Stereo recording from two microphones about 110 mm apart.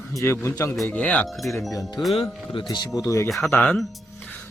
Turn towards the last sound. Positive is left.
turn(degrees=10)  # may be behind; listen again after turning